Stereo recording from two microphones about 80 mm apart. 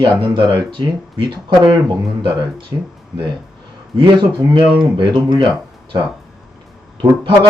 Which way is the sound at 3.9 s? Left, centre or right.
Right.